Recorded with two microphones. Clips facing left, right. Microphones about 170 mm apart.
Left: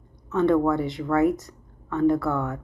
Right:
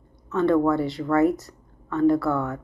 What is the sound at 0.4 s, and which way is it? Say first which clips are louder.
A woman's voice: even; 20° left (ahead or behind).